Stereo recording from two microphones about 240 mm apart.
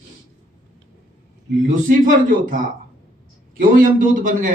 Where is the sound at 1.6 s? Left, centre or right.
Right.